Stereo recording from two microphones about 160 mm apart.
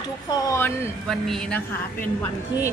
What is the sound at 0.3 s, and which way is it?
Speech, 15° left (ahead or behind).